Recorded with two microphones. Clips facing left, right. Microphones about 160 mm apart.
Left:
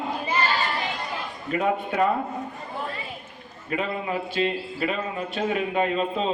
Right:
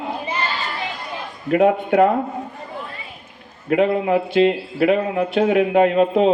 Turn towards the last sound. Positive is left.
turn(degrees=-65)  # may be behind; listen again after turning